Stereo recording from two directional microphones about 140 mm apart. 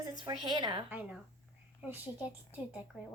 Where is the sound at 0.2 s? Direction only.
30° right (ahead or behind).